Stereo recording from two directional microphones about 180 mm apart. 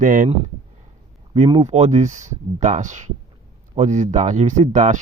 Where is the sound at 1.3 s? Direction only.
30° right (ahead or behind).